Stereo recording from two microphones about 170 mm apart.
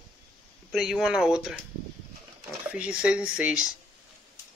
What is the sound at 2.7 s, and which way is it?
Speech, 5° right (ahead or behind).